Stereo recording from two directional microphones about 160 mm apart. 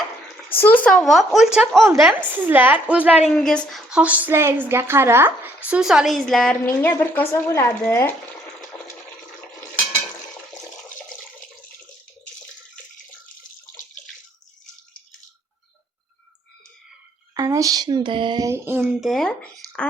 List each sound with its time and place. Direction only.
0.5 s a woman's voice: 10° left (ahead or behind); by 3.2 s 10° right (ahead or behind)
3.2 s a woman's voice: 5° left (ahead or behind)
6.7 s speech: 15° left (ahead or behind)
8.7 s toilet flush: 10° left (ahead or behind)
17.3 s speech: 20° right (ahead or behind)
18.4 s a woman's voice: 15° right (ahead or behind)
18.9 s speech: centre (ahead or behind)
19.6 s a sound: 20° right (ahead or behind)